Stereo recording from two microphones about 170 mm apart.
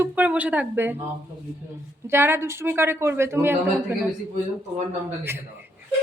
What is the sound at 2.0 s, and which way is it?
A woman's voice, 15° right (ahead or behind).